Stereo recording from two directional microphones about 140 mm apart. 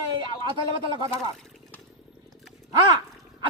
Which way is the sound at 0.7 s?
35° right (ahead or behind).